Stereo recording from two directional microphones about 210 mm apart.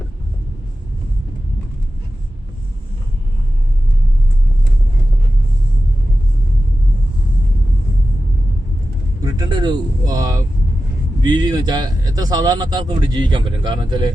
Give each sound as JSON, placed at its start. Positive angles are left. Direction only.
{"t": 9.2, "sound": "vehicle", "side_deg": -20}
{"t": 11.2, "sound": "a man's voice", "side_deg": -20}